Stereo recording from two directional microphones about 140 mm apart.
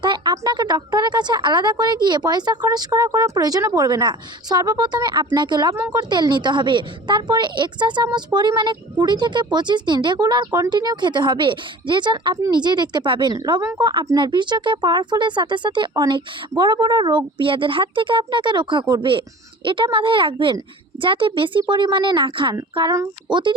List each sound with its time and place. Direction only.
0.0 s a woman's voice: 30° right (ahead or behind)